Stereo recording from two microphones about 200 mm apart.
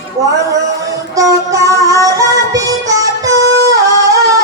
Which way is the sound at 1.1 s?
15° right (ahead or behind).